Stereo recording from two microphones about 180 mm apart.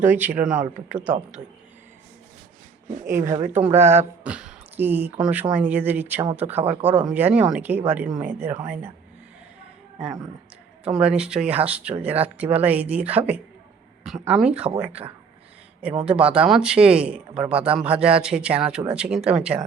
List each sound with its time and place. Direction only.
0.0 s speech: 10° right (ahead or behind)
3.0 s speech: 15° right (ahead or behind)
10.8 s a man's voice: 5° right (ahead or behind)
16.0 s a man's voice: 5° right (ahead or behind)